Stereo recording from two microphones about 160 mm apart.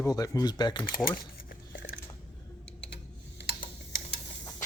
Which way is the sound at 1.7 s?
80° left.